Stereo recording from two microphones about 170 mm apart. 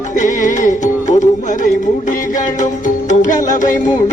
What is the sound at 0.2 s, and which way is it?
Music, 50° left (ahead or behind).